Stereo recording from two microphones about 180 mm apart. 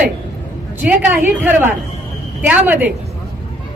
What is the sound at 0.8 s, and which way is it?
A woman's voice, 10° right (ahead or behind).